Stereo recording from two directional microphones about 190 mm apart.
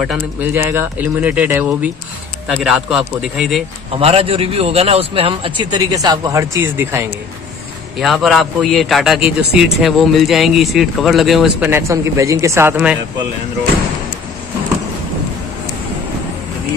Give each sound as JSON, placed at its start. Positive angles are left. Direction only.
{"t": 0.0, "sound": "speech", "side_deg": -5}
{"t": 3.9, "sound": "a man's voice", "side_deg": -30}
{"t": 8.0, "sound": "speech", "side_deg": 0}